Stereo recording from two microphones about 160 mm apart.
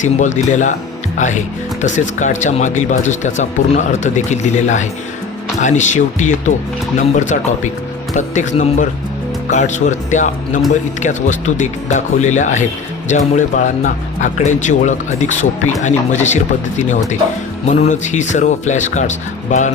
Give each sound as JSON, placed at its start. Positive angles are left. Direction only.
{"t": 0.0, "sound": "speech", "side_deg": 50}